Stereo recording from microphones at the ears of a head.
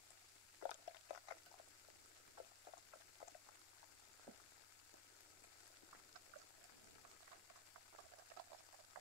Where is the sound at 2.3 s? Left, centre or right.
Left.